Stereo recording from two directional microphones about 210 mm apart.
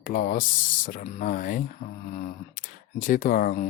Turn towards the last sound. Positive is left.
turn(degrees=40)  # may be behind; listen again after turning